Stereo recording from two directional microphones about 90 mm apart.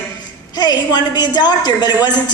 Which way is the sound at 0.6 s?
50° left (ahead or behind).